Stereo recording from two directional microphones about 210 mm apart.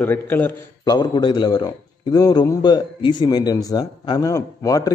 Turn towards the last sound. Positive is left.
turn(degrees=15)  # may be behind; listen again after turning